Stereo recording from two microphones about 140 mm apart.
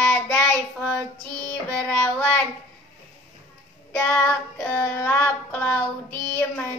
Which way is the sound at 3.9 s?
15° left (ahead or behind).